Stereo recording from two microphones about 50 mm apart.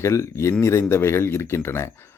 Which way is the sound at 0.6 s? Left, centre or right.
Left.